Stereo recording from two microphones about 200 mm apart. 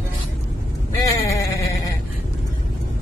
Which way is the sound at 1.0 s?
15° left (ahead or behind).